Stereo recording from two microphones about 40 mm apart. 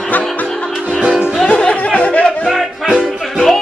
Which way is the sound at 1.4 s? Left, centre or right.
Left.